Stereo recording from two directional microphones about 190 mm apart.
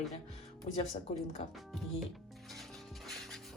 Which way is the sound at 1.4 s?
35° left (ahead or behind).